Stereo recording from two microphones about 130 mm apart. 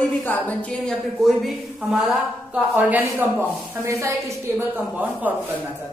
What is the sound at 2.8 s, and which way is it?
Speech, 15° right (ahead or behind).